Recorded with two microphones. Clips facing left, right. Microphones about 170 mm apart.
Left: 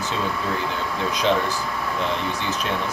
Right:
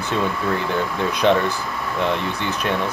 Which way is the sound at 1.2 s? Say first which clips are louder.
Right 4 dB; 60° right (ahead or behind).